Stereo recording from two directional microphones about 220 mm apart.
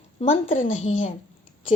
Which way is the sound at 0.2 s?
30° left (ahead or behind).